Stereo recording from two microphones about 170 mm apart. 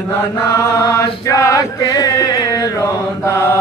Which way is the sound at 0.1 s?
15° left (ahead or behind).